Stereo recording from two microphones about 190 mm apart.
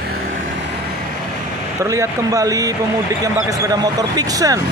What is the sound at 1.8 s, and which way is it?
Speech, 15° right (ahead or behind).